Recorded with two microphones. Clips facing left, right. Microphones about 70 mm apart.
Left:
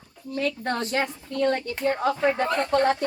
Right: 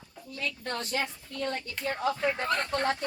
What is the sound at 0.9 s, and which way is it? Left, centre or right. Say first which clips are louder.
Speech: left 7 dB; left.